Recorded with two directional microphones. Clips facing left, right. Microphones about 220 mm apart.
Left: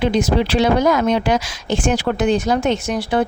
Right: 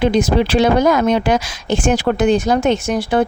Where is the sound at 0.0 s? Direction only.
50° right (ahead or behind).